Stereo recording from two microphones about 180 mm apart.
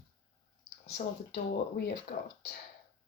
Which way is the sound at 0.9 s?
60° left (ahead or behind).